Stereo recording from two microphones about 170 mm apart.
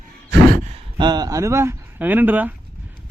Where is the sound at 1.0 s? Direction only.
25° right (ahead or behind).